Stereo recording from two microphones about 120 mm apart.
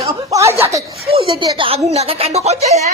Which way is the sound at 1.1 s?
45° right (ahead or behind).